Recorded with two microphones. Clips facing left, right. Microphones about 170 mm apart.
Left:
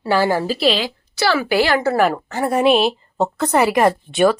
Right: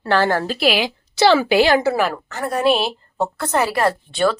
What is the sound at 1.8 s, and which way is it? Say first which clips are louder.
Speech: left 2 dB; centre (ahead or behind).